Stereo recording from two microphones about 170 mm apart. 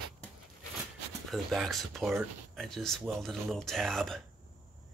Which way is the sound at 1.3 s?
Centre (ahead or behind).